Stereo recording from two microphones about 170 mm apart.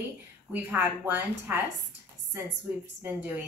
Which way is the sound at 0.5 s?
10° right (ahead or behind).